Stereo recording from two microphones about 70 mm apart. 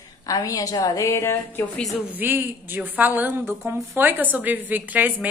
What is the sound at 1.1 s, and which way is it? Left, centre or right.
Speech, left.